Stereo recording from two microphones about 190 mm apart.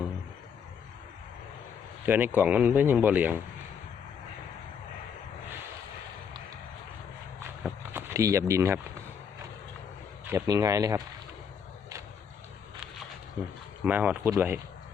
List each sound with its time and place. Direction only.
2.0 s speech: 10° right (ahead or behind)
7.6 s a sound: 15° right (ahead or behind)
10.2 s speech: 15° right (ahead or behind)
13.8 s speech: 10° right (ahead or behind)